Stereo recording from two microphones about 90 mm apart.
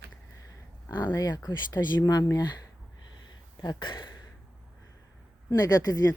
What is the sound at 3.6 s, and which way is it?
Speech, 55° left (ahead or behind).